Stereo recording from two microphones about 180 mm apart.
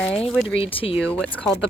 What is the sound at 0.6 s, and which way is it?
Speech, 30° left (ahead or behind).